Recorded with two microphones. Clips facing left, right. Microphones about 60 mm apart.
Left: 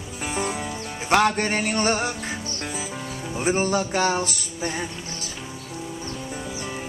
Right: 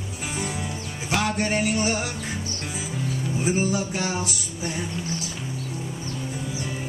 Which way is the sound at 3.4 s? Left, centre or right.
Left.